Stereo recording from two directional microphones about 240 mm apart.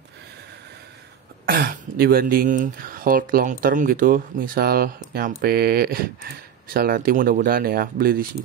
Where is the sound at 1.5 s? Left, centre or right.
Right.